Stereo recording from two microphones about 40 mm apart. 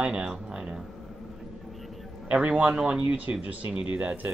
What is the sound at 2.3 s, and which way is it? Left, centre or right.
Speech, right.